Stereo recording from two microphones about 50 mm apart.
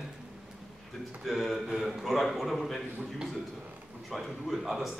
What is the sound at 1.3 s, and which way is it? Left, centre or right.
A man's voice, centre.